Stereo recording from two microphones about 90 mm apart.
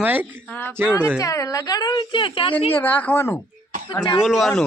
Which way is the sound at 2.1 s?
70° left (ahead or behind).